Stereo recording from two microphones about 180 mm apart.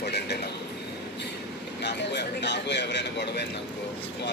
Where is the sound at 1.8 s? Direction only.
70° left (ahead or behind).